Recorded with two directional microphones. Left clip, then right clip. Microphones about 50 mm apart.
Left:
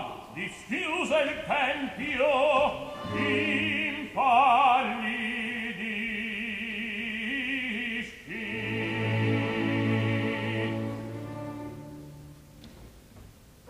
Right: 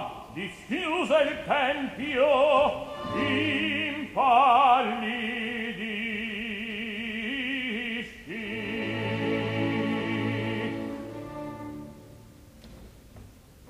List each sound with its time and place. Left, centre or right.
0.4 s a sound: left
1.0 s opera: centre
4.1 s music: left